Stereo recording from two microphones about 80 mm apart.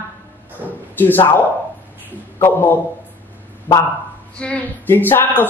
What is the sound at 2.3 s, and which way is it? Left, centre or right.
Speech, left.